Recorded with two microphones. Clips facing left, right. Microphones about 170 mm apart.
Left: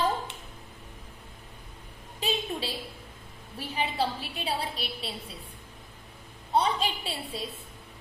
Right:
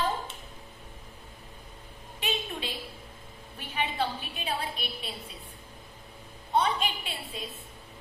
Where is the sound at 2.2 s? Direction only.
35° left (ahead or behind).